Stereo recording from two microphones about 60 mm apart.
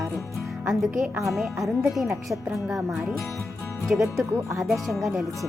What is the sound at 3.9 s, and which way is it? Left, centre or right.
Speech, right.